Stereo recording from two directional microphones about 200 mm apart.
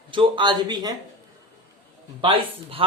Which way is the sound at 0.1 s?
25° right (ahead or behind).